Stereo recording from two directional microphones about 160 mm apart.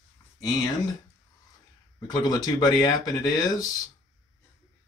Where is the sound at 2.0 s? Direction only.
25° left (ahead or behind).